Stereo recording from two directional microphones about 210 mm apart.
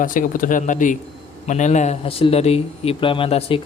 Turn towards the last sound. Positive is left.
turn(degrees=25)  # may be behind; listen again after turning